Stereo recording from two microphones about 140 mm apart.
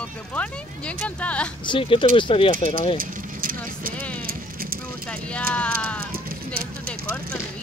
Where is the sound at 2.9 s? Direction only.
90° right.